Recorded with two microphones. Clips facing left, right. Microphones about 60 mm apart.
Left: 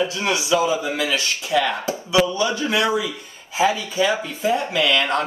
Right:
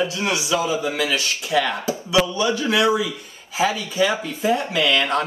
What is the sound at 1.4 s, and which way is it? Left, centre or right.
Speech, centre.